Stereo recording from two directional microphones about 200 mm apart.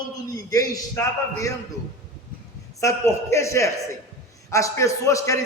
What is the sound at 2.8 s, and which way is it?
A man's voice, 15° left (ahead or behind).